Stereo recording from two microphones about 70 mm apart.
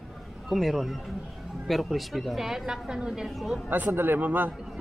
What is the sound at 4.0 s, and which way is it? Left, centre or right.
Speech, right.